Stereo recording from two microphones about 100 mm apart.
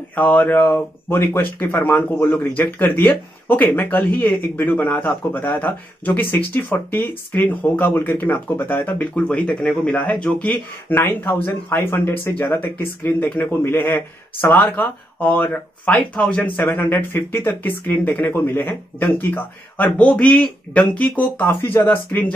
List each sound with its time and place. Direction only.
0.1 s speech: 15° left (ahead or behind)
16.5 s speech: 20° left (ahead or behind)